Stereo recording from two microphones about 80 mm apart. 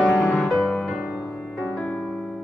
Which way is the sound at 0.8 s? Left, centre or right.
Centre.